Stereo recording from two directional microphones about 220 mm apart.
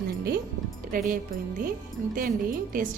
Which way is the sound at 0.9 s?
40° right (ahead or behind).